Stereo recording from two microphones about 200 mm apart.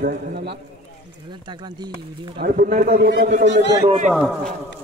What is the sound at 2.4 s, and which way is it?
A man's voice, 50° right (ahead or behind).